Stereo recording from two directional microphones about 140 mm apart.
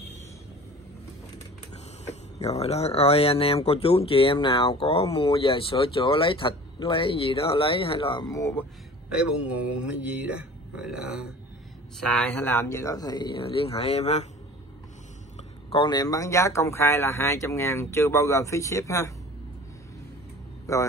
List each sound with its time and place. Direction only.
2.0 s speech: 50° left (ahead or behind)
8.3 s speech: 20° left (ahead or behind)
9.1 s speech: 5° right (ahead or behind)
12.0 s speech: 10° left (ahead or behind); by 14.2 s 50° left (ahead or behind)
15.3 s a sound: 45° left (ahead or behind)
15.9 s speech: 25° left (ahead or behind)
20.7 s a man's voice: 20° left (ahead or behind)